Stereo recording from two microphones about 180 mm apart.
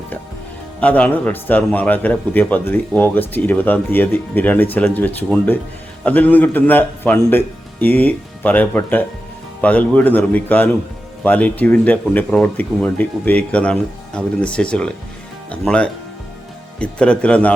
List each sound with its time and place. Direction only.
0.8 s a man's voice: 5° left (ahead or behind)